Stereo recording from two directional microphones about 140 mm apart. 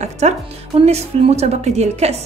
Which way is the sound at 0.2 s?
55° right (ahead or behind).